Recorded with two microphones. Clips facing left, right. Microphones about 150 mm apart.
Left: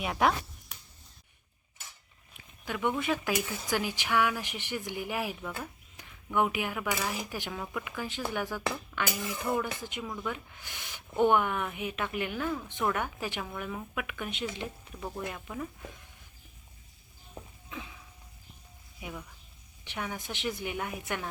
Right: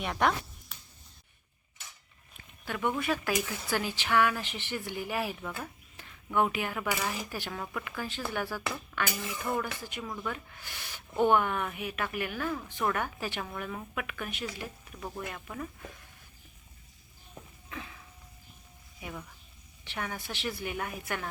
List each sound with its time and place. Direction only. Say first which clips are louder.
0.0 s speech: left 1 dB; 5° left (ahead or behind)
2.6 s speech: left 1 dB; 15° left (ahead or behind)
12.4 s speech: even; 10° left (ahead or behind)
13.4 s speech: even; 5° left (ahead or behind); by 14.7 s 25° left (ahead or behind)
15.4 s speech: left 1 dB; 5° left (ahead or behind)
17.7 s a sound: right 1 dB; 15° left (ahead or behind)
19.8 s speech: even; 15° left (ahead or behind)